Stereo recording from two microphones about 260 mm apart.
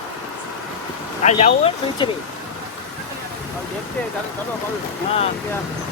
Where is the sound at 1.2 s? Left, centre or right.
Left.